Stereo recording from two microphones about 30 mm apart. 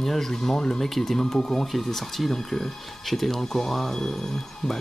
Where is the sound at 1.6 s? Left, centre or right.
Centre.